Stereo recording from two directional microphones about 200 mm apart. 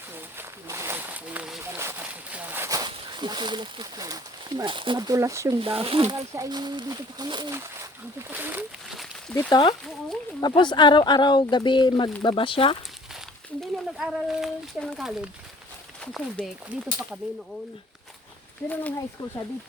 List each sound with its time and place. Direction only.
0.3 s a sound: 15° right (ahead or behind)
5.5 s speech: 25° right (ahead or behind); by 9.0 s 5° right (ahead or behind)
9.5 s speech: 25° left (ahead or behind)
13.6 s speech: centre (ahead or behind)
18.7 s speech: 5° left (ahead or behind)